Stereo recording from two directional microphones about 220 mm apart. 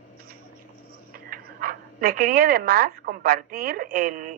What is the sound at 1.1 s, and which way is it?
Speech, 40° right (ahead or behind).